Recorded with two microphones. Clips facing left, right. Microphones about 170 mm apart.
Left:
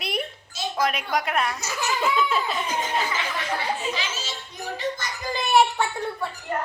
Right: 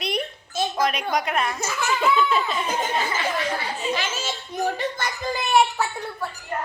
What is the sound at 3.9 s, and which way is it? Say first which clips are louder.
A child's voice: right 4 dB; 50° right (ahead or behind).